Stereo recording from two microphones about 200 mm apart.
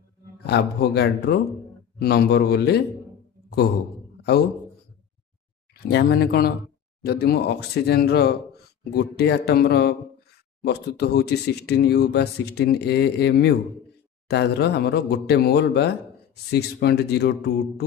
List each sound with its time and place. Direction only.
0.5 s a man's voice: 55° left (ahead or behind)
5.9 s a man's voice: 55° left (ahead or behind)